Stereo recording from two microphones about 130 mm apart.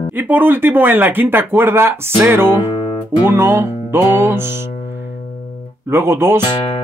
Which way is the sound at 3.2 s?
20° right (ahead or behind).